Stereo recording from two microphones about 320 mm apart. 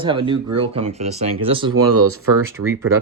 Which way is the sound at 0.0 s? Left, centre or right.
Centre.